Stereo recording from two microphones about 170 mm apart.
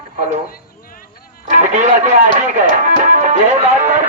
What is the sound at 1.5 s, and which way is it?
Speech, 45° right (ahead or behind).